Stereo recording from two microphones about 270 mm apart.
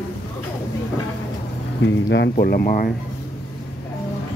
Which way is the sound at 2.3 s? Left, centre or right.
Left.